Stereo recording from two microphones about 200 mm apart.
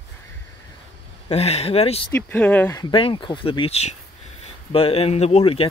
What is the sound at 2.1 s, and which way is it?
Speech, 10° left (ahead or behind).